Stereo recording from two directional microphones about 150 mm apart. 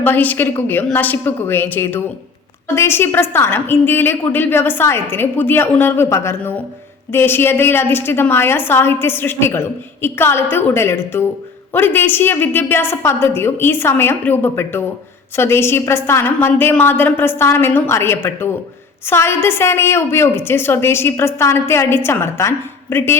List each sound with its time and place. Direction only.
0.0 s a woman's voice: 10° left (ahead or behind)